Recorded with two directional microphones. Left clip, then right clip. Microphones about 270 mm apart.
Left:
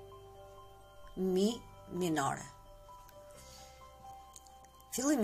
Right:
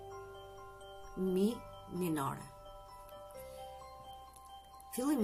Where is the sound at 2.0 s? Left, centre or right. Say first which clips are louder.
Left 4 dB; right.